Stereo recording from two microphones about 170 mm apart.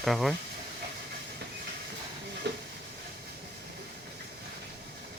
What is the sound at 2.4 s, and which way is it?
Hiss, 80° right.